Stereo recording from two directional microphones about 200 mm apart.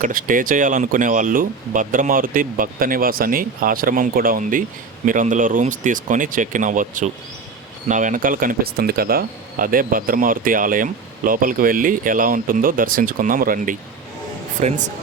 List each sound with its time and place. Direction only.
0.0 s speech: 45° right (ahead or behind)